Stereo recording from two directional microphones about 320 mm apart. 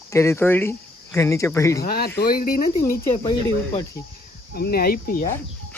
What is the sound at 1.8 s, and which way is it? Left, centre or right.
Speech, left.